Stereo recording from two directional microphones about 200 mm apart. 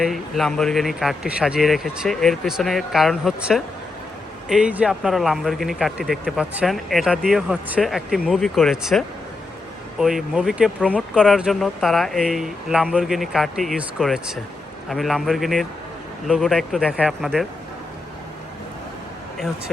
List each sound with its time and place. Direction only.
0.0 s speech: centre (ahead or behind)